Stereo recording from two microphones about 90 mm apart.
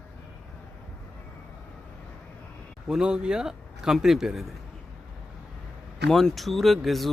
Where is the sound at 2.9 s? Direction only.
10° right (ahead or behind).